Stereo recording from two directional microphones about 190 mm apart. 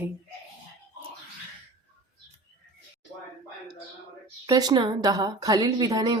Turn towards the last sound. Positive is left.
turn(degrees=-20)  # may be behind; listen again after turning